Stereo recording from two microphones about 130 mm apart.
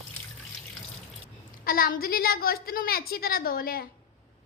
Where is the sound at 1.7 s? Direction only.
90° left.